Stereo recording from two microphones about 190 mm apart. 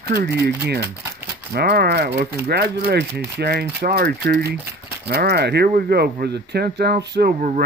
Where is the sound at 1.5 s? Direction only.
55° right (ahead or behind).